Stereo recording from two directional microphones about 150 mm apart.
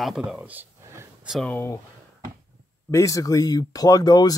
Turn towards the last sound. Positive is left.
turn(degrees=25)  # may be behind; listen again after turning